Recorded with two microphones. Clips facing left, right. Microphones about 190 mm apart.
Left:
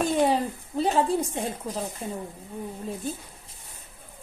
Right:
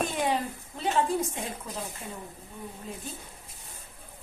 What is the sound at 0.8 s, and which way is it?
Speech, 35° left (ahead or behind).